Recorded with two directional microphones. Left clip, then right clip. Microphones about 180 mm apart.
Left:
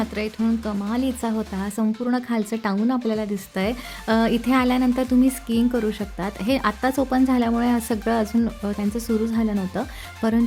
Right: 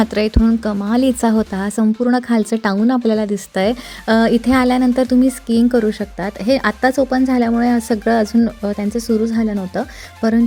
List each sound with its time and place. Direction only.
0.0 s speech: 35° right (ahead or behind); by 10.4 s 20° right (ahead or behind)